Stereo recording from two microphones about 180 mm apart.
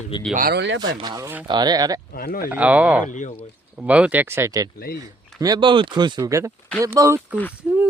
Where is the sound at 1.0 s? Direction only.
20° right (ahead or behind).